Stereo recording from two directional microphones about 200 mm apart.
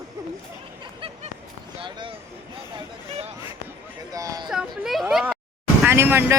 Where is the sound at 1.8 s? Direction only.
25° right (ahead or behind).